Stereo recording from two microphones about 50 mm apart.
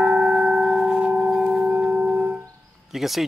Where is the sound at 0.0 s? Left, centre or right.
Centre.